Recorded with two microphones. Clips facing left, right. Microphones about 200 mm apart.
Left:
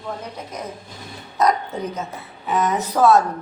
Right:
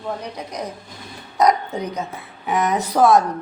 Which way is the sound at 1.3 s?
15° right (ahead or behind).